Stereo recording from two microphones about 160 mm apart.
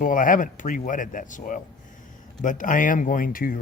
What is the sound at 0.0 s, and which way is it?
Speech, 55° left (ahead or behind).